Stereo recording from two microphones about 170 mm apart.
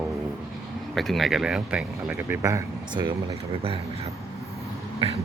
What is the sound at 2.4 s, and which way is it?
Speech, 20° right (ahead or behind).